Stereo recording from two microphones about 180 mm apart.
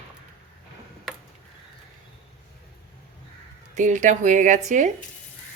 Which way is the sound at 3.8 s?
45° right (ahead or behind).